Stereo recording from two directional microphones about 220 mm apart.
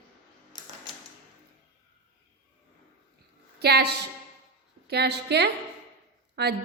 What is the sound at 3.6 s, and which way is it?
A woman's voice, 50° right (ahead or behind).